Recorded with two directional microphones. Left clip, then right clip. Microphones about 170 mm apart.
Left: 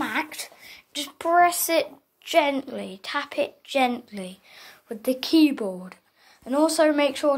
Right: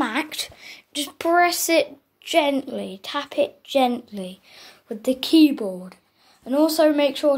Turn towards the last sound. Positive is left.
turn(degrees=0)  # may be behind; listen again after turning